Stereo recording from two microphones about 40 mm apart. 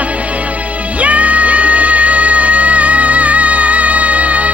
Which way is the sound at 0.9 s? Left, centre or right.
Right.